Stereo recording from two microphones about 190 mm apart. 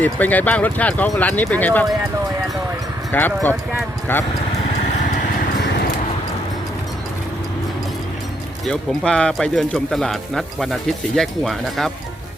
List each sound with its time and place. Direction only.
0.0 s speech: 10° left (ahead or behind)
3.1 s speech: 10° left (ahead or behind)
8.6 s speech: 5° left (ahead or behind)